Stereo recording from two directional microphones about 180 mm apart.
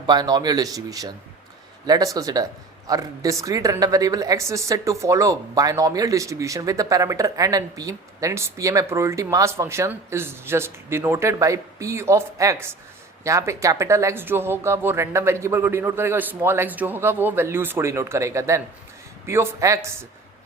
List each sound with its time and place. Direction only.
0.1 s speech: 25° right (ahead or behind)